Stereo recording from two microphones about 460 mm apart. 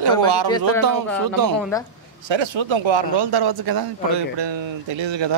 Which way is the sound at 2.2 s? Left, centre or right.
Right.